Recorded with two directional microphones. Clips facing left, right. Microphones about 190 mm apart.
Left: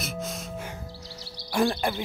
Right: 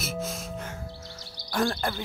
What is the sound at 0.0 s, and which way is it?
Music, centre (ahead or behind).